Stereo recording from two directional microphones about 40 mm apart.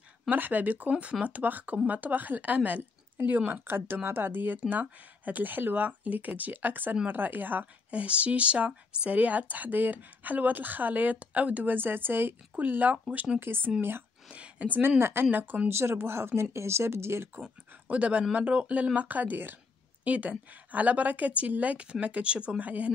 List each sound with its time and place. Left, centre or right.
0.3 s speech: right
0.8 s speech: right
3.6 s speech: right
7.9 s speech: right
11.6 s a woman's voice: right
12.5 s speech: right
13.4 s a woman's voice: right
14.3 s speech: right
14.8 s speech: right
15.7 s speech: right
17.8 s speech: right
18.9 s speech: right
20.1 s speech: right
22.6 s speech: right